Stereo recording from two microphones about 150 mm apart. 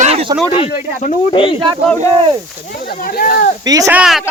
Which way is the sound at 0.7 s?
65° left (ahead or behind).